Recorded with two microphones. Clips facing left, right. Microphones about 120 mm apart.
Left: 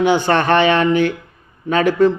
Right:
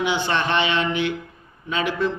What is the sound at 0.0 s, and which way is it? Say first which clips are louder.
A man's voice: left 8 dB; 45° left (ahead or behind).